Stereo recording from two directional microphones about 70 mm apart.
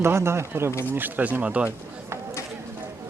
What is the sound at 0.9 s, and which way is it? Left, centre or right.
Speech, right.